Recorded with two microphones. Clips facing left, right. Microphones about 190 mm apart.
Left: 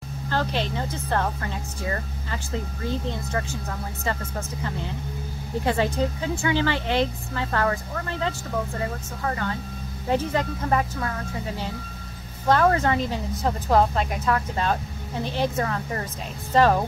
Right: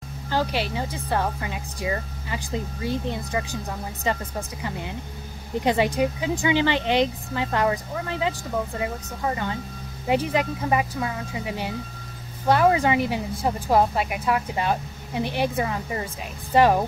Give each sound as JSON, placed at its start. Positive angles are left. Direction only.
{"t": 0.3, "sound": "speech", "side_deg": -10}